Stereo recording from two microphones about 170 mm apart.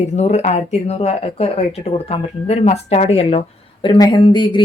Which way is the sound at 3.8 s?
25° left (ahead or behind).